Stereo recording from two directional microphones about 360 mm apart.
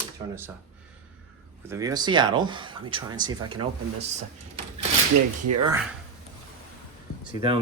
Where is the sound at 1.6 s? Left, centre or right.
Centre.